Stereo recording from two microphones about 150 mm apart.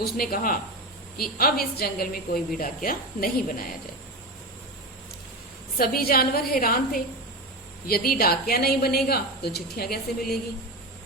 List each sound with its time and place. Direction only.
0.0 s a woman's voice: 80° left
5.7 s a woman's voice: 85° left
7.9 s a woman's voice: 90° left